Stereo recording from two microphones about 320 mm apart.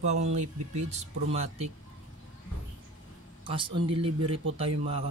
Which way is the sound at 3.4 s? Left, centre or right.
Centre.